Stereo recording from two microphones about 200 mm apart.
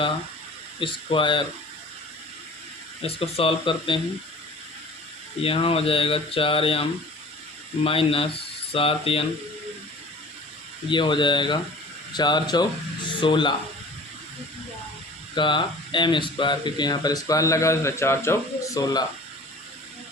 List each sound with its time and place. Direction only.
0.8 s speech: 25° left (ahead or behind)
3.0 s speech: 30° left (ahead or behind)
5.4 s speech: 25° left (ahead or behind)
7.9 s speech: 25° left (ahead or behind)
10.8 s speech: 25° left (ahead or behind)
15.4 s speech: 25° left (ahead or behind)